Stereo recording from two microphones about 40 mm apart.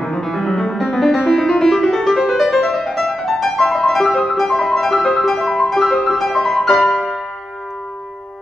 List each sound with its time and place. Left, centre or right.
0.0 s music: centre
0.9 s music: centre